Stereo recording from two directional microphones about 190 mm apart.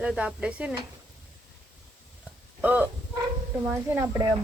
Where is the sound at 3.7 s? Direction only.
15° right (ahead or behind).